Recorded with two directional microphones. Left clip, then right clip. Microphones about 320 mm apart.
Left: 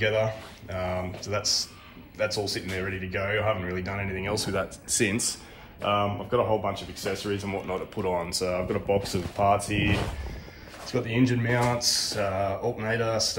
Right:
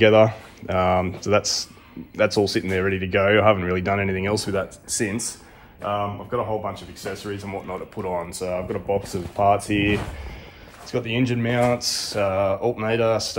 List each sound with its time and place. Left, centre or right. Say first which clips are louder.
0.0 s speech: right 10 dB; centre
3.3 s speech: right 10 dB; right
3.6 s speech: right 9 dB; centre
4.9 s speech: even; centre
9.4 s speech: right 5 dB; right
9.8 s speech: right 5 dB; centre